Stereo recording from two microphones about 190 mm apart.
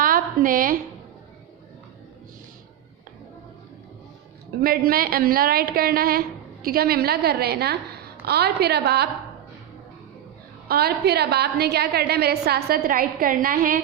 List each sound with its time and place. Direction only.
0.0 s a sound: 50° right (ahead or behind)
4.6 s a woman's voice: 50° right (ahead or behind)
10.7 s a woman's voice: 55° right (ahead or behind)